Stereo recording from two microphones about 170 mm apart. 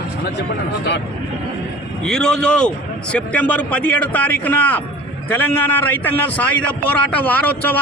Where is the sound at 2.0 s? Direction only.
5° left (ahead or behind).